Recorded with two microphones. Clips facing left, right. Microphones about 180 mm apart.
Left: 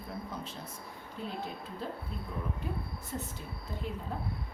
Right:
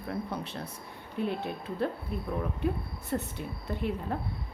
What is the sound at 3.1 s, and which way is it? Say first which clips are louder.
A woman's voice: right 8 dB; 65° right (ahead or behind).